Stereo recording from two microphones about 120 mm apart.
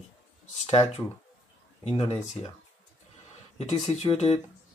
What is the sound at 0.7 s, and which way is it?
Speech, 55° left (ahead or behind).